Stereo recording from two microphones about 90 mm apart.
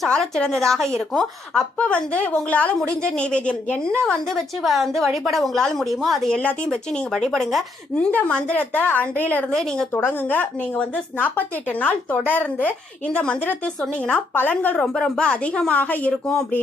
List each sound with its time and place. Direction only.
0.0 s a woman's voice: 5° left (ahead or behind)
6.3 s a woman's voice: 15° left (ahead or behind)
7.1 s a woman's voice: 5° left (ahead or behind)